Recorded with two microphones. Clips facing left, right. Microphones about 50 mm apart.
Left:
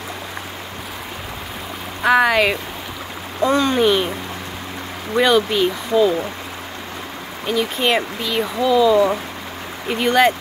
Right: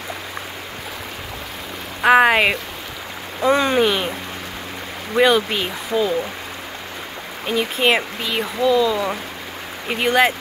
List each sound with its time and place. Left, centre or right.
2.0 s speech: right
3.8 s speech: centre
5.1 s speech: centre
7.4 s speech: centre
9.8 s speech: centre